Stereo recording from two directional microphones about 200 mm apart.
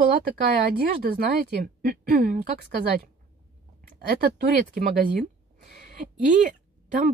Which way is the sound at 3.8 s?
50° right (ahead or behind).